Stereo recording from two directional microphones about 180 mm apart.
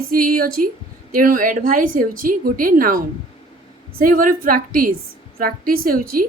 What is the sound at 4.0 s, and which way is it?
A woman's voice, 50° right (ahead or behind).